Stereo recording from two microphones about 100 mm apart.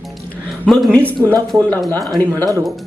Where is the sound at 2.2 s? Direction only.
20° left (ahead or behind).